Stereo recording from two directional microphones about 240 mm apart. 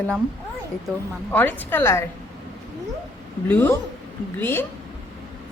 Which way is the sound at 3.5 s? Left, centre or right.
Centre.